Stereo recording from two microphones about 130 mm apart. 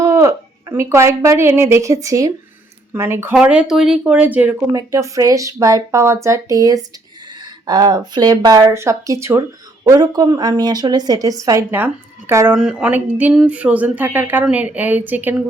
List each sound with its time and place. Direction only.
0.0 s a woman's voice: 25° right (ahead or behind)
3.3 s speech: 10° right (ahead or behind)
4.7 s a woman's voice: 25° right (ahead or behind)
12.5 s speech: 5° right (ahead or behind)